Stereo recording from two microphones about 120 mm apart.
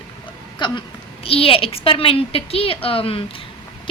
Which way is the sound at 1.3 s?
50° left (ahead or behind).